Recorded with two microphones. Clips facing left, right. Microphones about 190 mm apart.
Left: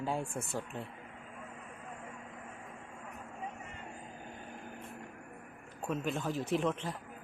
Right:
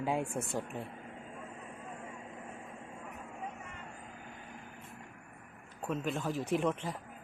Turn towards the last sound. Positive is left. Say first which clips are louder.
# right 1 dB
turn(degrees=-5)  # may be behind; listen again after turning